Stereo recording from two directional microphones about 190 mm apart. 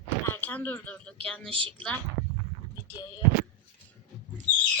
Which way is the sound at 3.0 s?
20° left (ahead or behind).